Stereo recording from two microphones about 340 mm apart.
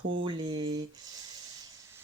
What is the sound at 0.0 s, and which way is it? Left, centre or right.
Speech, right.